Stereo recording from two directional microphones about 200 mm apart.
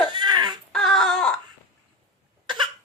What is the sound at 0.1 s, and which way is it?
Baby cry, 20° right (ahead or behind).